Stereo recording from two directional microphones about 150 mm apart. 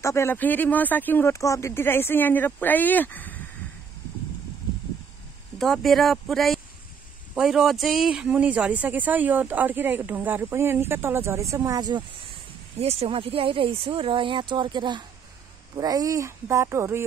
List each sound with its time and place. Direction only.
0.0 s speech: 20° left (ahead or behind)
5.6 s speech: centre (ahead or behind); by 12.0 s 25° right (ahead or behind)
12.7 s speech: 40° right (ahead or behind); by 17.0 s 15° right (ahead or behind)